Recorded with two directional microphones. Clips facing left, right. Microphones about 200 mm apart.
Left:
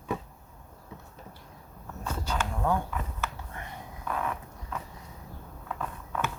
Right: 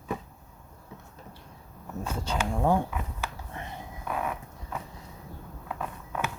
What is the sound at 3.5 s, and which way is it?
Whispering, 25° right (ahead or behind).